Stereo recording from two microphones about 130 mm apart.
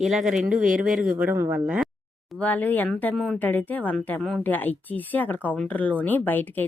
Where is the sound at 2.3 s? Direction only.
10° left (ahead or behind).